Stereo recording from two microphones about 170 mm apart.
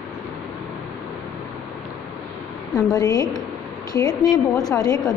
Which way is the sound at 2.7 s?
20° left (ahead or behind).